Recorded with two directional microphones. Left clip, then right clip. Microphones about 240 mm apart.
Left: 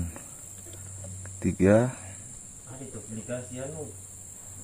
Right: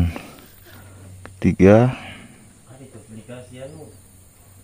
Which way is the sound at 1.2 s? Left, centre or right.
Right.